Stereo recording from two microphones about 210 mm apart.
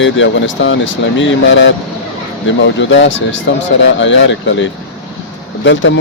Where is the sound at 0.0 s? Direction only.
65° left (ahead or behind).